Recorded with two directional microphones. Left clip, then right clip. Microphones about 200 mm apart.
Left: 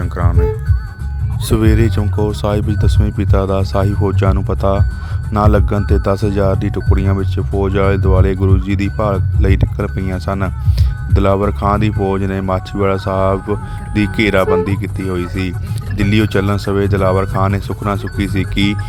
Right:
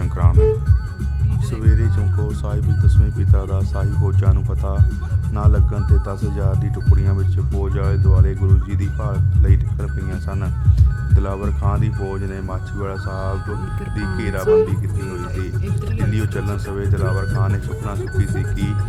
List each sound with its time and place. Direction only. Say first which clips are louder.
0.0 s music: left 5 dB; 20° left (ahead or behind)
1.5 s speech: left 14 dB; 45° left (ahead or behind)